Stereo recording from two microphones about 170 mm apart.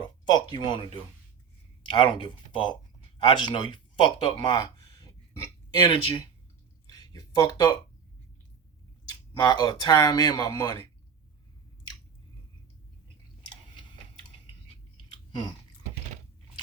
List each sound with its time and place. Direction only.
0.0 s speech: 25° left (ahead or behind)
5.9 s speech: 30° left (ahead or behind)
6.9 s a sound: 20° left (ahead or behind)
9.4 s speech: 25° left (ahead or behind)